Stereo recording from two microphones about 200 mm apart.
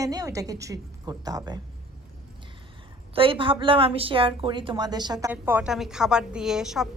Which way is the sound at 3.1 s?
25° right (ahead or behind).